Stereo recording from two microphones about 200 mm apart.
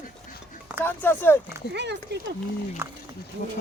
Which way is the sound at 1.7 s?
60° right (ahead or behind).